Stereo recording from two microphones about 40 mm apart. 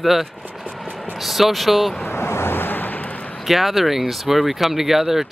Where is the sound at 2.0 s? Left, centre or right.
Left.